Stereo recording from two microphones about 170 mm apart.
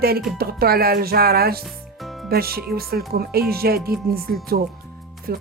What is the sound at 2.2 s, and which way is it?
Speech, 65° right (ahead or behind).